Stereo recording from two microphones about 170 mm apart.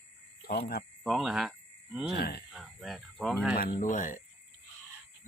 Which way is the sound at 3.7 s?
50° left (ahead or behind).